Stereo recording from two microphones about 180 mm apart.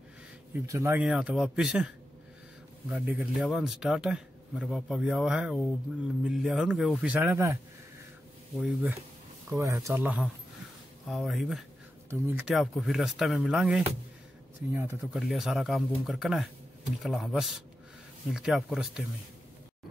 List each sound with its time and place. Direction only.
0.7 s a man's voice: 15° right (ahead or behind)
2.9 s a man's voice: centre (ahead or behind)
8.5 s a man's voice: 5° right (ahead or behind)
9.5 s a man's voice: 15° right (ahead or behind)
12.1 s a man's voice: 10° right (ahead or behind)
14.7 s speech: 15° right (ahead or behind)
15.1 s a man's voice: centre (ahead or behind)